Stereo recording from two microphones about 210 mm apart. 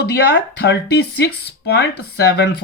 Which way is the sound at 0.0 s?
50° left (ahead or behind).